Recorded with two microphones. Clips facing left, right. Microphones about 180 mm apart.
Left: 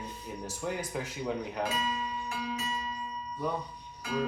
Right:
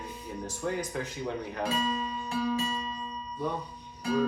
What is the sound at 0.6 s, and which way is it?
Speech, 10° left (ahead or behind).